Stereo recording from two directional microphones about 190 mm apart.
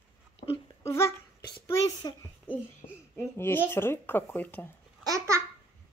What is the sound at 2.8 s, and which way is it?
Speech, 30° left (ahead or behind).